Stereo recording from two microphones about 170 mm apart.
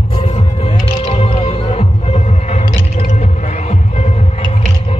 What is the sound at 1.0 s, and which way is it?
Music, 35° left (ahead or behind).